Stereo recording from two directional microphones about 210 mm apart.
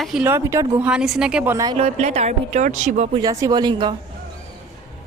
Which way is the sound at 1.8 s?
30° right (ahead or behind).